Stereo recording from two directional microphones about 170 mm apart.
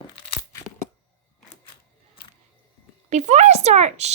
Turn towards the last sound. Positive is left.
turn(degrees=-40)  # may be behind; listen again after turning